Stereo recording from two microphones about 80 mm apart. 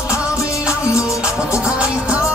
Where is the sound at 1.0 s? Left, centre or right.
Centre.